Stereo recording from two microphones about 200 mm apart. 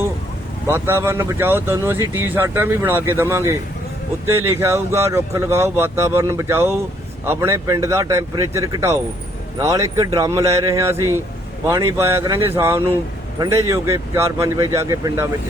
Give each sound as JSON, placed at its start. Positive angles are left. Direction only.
{"t": 0.7, "sound": "speech", "side_deg": -10}